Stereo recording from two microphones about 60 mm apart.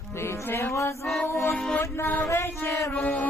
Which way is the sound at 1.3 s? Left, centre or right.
Left.